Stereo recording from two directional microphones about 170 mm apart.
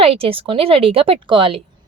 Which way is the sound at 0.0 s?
35° right (ahead or behind).